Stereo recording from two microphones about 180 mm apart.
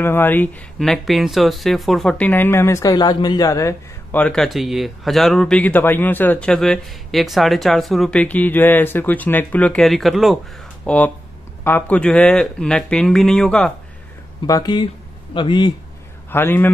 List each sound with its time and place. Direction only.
0.0 s a man's voice: 10° left (ahead or behind)
14.4 s speech: 20° left (ahead or behind)
16.3 s a man's voice: 10° left (ahead or behind)